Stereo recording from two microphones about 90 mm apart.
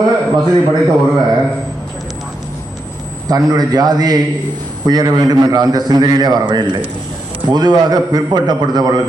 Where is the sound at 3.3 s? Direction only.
45° right (ahead or behind).